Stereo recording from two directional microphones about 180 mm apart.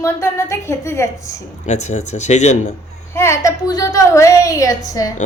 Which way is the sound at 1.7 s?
40° left (ahead or behind).